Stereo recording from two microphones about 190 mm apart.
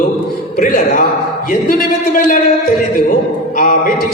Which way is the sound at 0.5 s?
45° left (ahead or behind).